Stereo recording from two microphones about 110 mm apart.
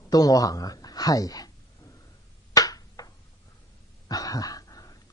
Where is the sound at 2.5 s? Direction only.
35° left (ahead or behind).